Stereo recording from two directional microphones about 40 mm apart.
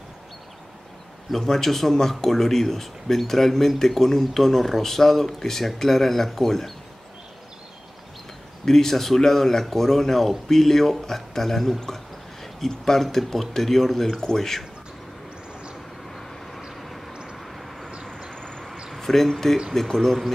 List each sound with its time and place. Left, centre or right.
1.3 s speech: centre
8.6 s speech: centre
16.1 s vehicle: centre
17.1 s vehicle: right
18.3 s train: centre
18.9 s speech: centre